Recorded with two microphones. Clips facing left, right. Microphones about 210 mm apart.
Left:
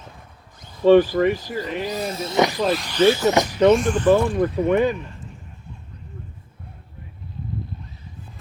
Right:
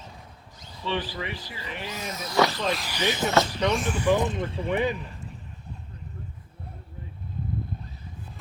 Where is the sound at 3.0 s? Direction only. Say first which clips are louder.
Left 15 dB; 15° right (ahead or behind).